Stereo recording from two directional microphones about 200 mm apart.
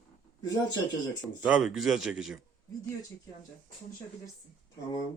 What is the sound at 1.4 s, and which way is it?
Speech, 5° right (ahead or behind).